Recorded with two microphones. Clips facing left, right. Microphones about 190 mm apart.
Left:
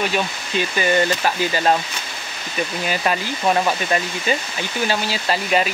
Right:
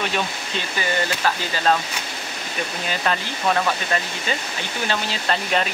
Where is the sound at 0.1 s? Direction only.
15° left (ahead or behind).